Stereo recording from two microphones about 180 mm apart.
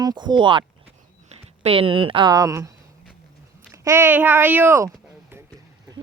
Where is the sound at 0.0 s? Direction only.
25° right (ahead or behind).